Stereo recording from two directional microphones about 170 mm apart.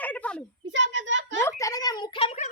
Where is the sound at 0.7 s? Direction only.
90° right.